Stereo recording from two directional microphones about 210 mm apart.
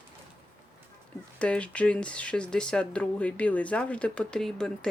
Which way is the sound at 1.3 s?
5° left (ahead or behind).